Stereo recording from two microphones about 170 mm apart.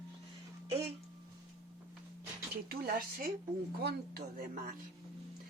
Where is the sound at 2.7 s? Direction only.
65° right (ahead or behind).